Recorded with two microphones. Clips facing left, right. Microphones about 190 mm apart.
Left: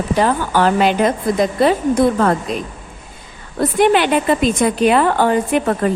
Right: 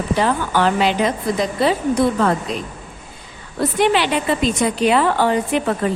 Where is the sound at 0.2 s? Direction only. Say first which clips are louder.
Left 3 dB; 45° left (ahead or behind).